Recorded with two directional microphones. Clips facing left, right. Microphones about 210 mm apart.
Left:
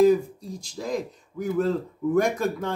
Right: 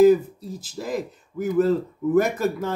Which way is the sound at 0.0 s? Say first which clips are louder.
Right 3 dB; 5° right (ahead or behind).